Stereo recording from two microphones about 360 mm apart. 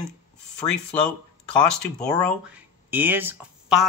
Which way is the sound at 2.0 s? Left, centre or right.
Centre.